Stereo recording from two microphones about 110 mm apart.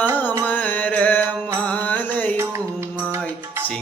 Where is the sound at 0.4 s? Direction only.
15° left (ahead or behind).